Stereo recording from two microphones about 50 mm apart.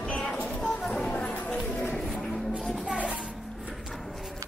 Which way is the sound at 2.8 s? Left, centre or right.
Right.